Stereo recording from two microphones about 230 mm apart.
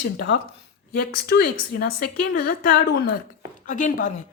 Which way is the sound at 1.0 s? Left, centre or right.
Left.